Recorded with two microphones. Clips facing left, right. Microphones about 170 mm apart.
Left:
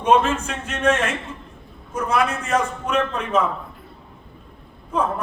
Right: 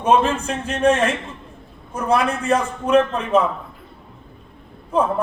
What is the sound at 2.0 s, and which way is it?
A man's voice, 30° right (ahead or behind).